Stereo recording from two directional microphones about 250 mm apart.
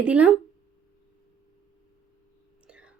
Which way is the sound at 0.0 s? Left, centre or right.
Centre.